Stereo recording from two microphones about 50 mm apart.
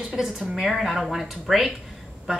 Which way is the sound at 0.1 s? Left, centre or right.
Centre.